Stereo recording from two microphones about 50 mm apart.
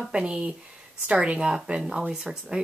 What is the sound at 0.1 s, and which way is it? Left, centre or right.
A woman's voice, centre.